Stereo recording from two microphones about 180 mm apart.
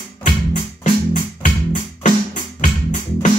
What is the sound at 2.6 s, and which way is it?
Music, 45° left (ahead or behind).